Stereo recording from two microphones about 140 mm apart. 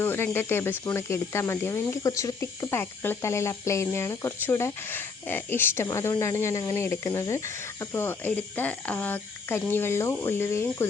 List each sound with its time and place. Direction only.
0.0 s speech: 15° left (ahead or behind)